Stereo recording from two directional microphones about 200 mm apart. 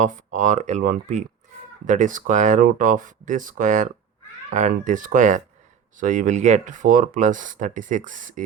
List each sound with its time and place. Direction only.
0.0 s speech: 40° right (ahead or behind)